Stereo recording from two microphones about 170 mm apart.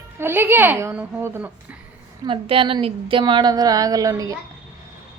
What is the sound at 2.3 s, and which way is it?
Speech, 30° right (ahead or behind).